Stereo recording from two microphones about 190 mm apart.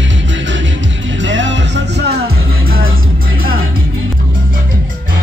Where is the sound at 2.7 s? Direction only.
90° right.